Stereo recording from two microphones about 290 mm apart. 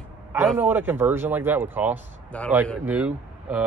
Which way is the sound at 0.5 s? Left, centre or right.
Centre.